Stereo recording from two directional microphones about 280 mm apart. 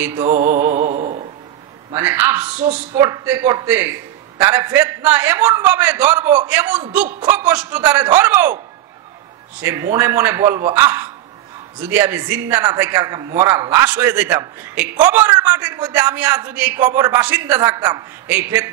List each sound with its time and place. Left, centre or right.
0.0 s a man's voice: centre
0.5 s music: centre
0.7 s music: right
1.9 s a man's voice: centre
9.6 s a man's voice: centre